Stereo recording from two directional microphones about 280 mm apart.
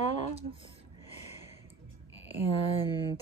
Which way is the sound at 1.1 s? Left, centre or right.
Left.